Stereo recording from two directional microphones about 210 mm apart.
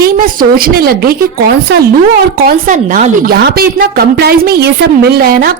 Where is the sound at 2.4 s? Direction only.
40° right (ahead or behind).